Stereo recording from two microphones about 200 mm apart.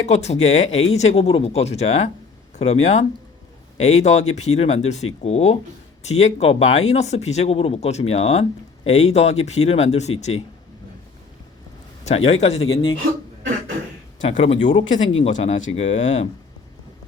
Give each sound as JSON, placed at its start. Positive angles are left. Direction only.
{"t": 0.1, "sound": "speech", "side_deg": 35}
{"t": 12.0, "sound": "speech", "side_deg": 30}
{"t": 14.3, "sound": "speech", "side_deg": 30}
{"t": 14.8, "sound": "speech", "side_deg": 75}
{"t": 15.2, "sound": "speech", "side_deg": 35}